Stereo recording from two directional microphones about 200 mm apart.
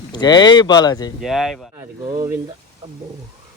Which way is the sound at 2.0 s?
20° right (ahead or behind).